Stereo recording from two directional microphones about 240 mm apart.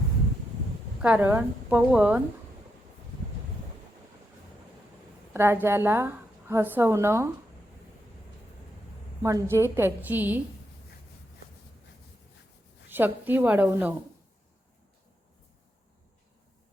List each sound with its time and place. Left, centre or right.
1.0 s a woman's voice: centre
5.3 s a woman's voice: centre
9.2 s a woman's voice: centre
12.9 s a woman's voice: centre